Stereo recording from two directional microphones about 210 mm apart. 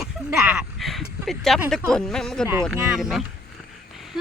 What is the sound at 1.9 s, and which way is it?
Speech, 5° left (ahead or behind).